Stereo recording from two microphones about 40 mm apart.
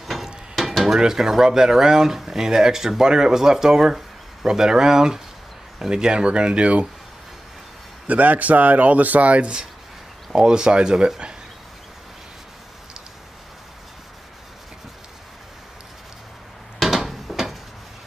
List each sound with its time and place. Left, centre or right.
0.0 s a sound: centre
0.6 s dishes: centre
0.9 s speech: centre; by 6.9 s right
8.1 s speech: right
10.3 s speech: centre
16.8 s a sound: centre